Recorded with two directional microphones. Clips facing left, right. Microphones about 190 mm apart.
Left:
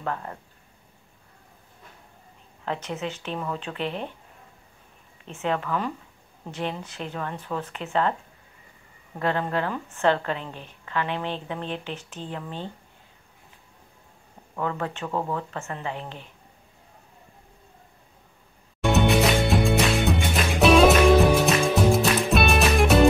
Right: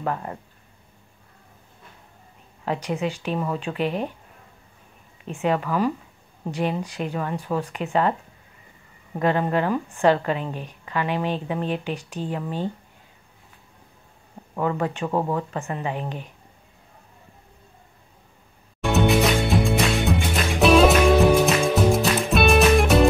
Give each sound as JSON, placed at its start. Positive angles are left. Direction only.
{"t": 0.0, "sound": "a woman's voice", "side_deg": -15}
{"t": 2.6, "sound": "a woman's voice", "side_deg": -10}
{"t": 5.2, "sound": "a woman's voice", "side_deg": -15}
{"t": 9.2, "sound": "a woman's voice", "side_deg": -15}
{"t": 14.6, "sound": "a woman's voice", "side_deg": -15}
{"t": 18.8, "sound": "music", "side_deg": 0}